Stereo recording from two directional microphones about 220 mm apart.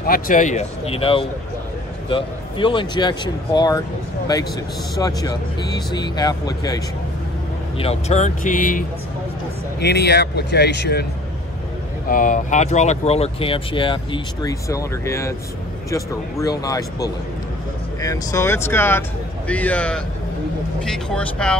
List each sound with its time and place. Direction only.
0.0 s speech: 40° left (ahead or behind); by 3.8 s 20° left (ahead or behind)
4.9 s speech: 15° left (ahead or behind)
7.8 s speech: 30° left (ahead or behind)
9.8 s speech: 50° left (ahead or behind)
12.1 s speech: 35° left (ahead or behind); by 21.5 s 5° left (ahead or behind)